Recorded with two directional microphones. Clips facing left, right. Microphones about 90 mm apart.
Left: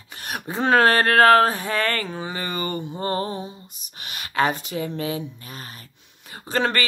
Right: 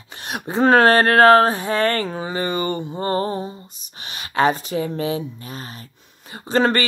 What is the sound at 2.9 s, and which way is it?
Music, 35° right (ahead or behind).